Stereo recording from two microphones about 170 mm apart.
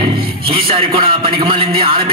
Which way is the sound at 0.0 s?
30° right (ahead or behind).